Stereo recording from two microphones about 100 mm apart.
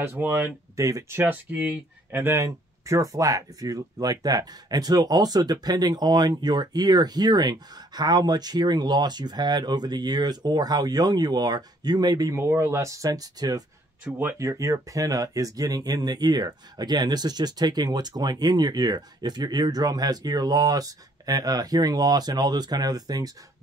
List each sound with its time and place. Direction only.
0.0 s speech: 25° right (ahead or behind)
0.7 s speech: 35° right (ahead or behind)
1.2 s speech: 20° right (ahead or behind); by 12.4 s 40° right (ahead or behind)
12.4 s speech: 30° right (ahead or behind)
14.0 s speech: 15° right (ahead or behind)
14.4 s speech: 30° right (ahead or behind)